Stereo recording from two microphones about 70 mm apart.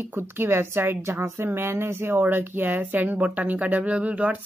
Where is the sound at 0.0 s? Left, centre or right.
Right.